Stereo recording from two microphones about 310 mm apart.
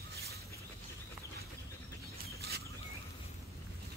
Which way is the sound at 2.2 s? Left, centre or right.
Right.